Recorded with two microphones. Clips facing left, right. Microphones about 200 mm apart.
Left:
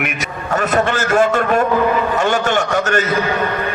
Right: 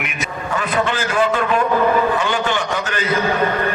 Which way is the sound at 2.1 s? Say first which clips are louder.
Left 4 dB; 45° left (ahead or behind).